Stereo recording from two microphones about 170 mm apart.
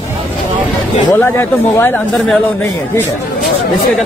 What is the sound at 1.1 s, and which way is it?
Speech, 15° left (ahead or behind).